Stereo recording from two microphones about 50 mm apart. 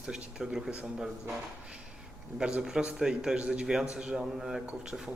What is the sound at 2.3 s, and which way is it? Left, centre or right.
Speech, centre.